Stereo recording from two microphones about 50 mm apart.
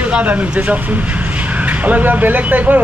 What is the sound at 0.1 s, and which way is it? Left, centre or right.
Speech, right.